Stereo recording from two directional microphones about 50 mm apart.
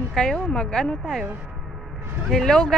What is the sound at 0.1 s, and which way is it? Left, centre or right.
Speech, centre.